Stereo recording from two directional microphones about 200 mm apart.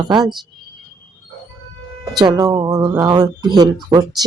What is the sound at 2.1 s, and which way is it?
A woman's voice, 20° right (ahead or behind).